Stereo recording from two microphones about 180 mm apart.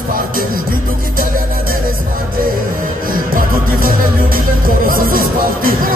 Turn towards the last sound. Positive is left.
turn(degrees=-55)  # may be behind; listen again after turning